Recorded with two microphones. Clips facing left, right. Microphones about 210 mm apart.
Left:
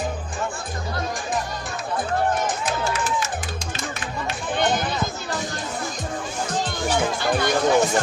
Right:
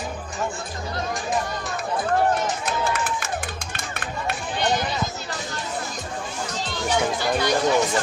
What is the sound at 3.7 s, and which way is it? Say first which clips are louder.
Music: left 1 dB; 55° right (ahead or behind).